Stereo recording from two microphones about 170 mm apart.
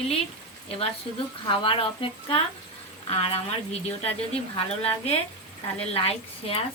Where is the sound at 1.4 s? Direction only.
30° left (ahead or behind).